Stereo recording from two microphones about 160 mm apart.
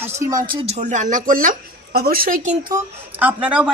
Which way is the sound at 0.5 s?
40° right (ahead or behind).